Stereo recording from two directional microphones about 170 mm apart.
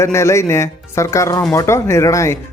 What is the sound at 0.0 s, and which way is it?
Speech, 15° left (ahead or behind).